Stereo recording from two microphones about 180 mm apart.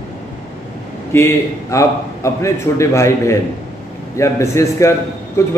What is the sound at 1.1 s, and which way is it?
Speech, 15° left (ahead or behind).